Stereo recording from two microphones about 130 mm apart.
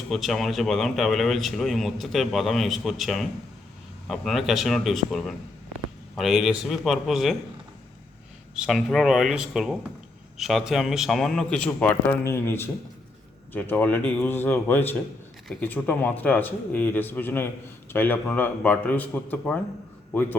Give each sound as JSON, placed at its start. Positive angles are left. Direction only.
{"t": 0.1, "sound": "a man's voice", "side_deg": 0}
{"t": 8.5, "sound": "a man's voice", "side_deg": 0}